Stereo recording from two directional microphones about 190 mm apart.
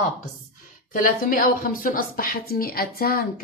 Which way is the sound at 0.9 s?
45° left (ahead or behind).